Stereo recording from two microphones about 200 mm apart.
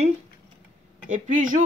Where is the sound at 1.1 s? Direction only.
40° right (ahead or behind).